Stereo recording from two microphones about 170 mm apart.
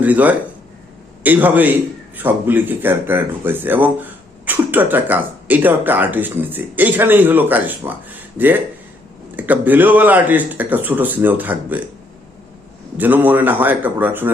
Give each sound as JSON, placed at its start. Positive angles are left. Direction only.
{"t": 0.0, "sound": "speech", "side_deg": -10}
{"t": 13.0, "sound": "speech", "side_deg": -10}